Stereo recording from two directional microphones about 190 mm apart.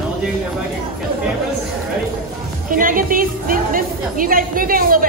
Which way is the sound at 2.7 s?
45° right (ahead or behind).